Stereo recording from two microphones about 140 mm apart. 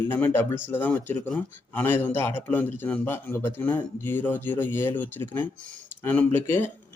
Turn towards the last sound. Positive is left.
turn(degrees=15)  # may be behind; listen again after turning